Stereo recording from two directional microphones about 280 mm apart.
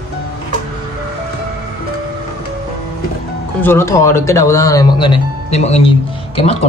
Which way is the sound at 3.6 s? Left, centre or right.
Centre.